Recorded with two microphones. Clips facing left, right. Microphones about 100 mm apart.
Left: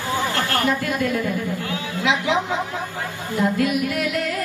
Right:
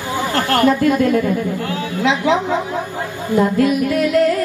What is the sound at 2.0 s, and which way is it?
Speech, 35° right (ahead or behind).